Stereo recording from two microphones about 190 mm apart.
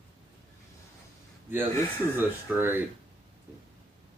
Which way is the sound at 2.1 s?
10° right (ahead or behind).